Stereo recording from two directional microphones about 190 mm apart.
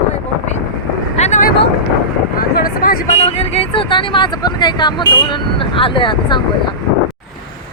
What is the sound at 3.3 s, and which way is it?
Speech, 35° left (ahead or behind).